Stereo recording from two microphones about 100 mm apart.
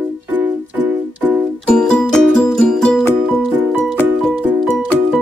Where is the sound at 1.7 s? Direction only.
10° left (ahead or behind).